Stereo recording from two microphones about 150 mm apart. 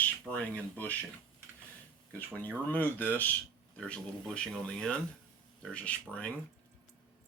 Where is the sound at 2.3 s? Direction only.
10° left (ahead or behind).